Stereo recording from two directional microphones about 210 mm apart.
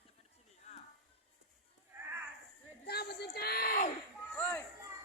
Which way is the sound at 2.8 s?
50° left (ahead or behind).